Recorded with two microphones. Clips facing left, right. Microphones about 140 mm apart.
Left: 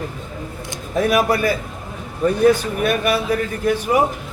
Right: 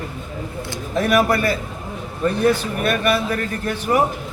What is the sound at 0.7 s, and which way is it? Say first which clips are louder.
Speech: left 1 dB; 10° left (ahead or behind).